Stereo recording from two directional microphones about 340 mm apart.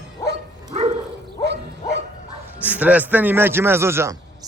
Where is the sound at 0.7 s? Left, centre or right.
Centre.